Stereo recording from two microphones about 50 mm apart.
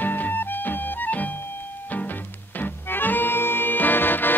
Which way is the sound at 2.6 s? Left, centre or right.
Left.